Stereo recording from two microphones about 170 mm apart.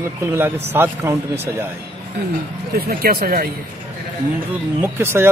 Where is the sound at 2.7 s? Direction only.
65° right (ahead or behind).